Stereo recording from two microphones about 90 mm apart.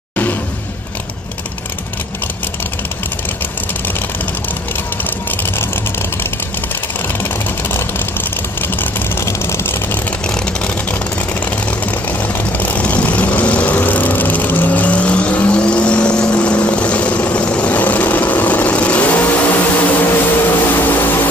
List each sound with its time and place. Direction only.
9.2 s vehicle: 30° left (ahead or behind)
12.5 s vehicle: 15° left (ahead or behind)